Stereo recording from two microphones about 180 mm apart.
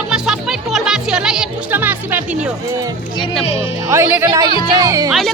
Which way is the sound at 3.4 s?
35° left (ahead or behind).